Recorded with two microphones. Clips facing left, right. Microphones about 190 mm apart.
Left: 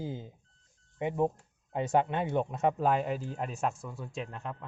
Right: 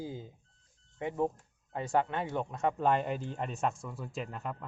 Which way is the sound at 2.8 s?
5° left (ahead or behind).